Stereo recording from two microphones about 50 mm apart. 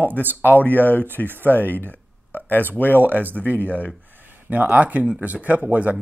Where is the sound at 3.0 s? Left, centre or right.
Right.